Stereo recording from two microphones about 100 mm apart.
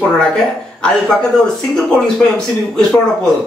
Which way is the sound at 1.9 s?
5° left (ahead or behind).